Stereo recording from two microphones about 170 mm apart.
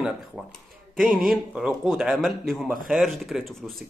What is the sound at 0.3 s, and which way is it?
A man's voice, centre (ahead or behind).